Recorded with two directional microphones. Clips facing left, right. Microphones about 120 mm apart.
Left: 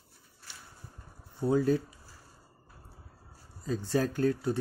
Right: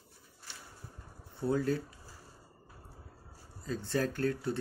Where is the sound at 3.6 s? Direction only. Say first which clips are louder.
Left 3 dB; 15° left (ahead or behind).